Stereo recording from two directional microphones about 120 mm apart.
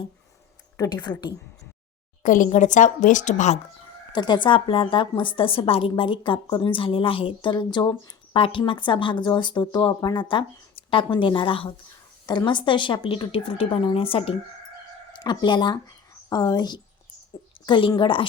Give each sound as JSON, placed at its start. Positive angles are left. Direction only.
{"t": 0.8, "sound": "speech", "side_deg": 35}
{"t": 2.2, "sound": "a woman's voice", "side_deg": 90}
{"t": 4.1, "sound": "a woman's voice", "side_deg": 40}
{"t": 12.2, "sound": "a woman's voice", "side_deg": 35}
{"t": 15.2, "sound": "a woman's voice", "side_deg": 40}